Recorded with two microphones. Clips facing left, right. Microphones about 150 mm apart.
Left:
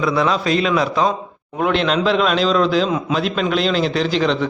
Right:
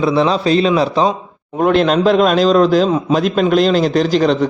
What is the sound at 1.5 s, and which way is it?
A man's voice, 40° right (ahead or behind).